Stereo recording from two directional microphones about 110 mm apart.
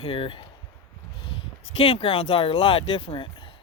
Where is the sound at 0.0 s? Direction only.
55° left (ahead or behind).